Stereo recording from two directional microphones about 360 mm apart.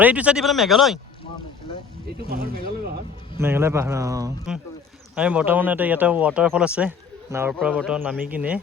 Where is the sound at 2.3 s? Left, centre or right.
Right.